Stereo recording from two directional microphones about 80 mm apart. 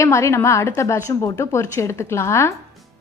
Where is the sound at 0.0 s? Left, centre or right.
Left.